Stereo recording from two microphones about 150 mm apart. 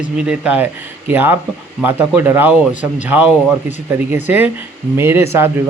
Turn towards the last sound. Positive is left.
turn(degrees=-15)  # may be behind; listen again after turning